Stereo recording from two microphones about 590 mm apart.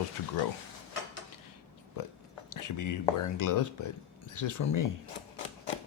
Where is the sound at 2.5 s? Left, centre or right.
Left.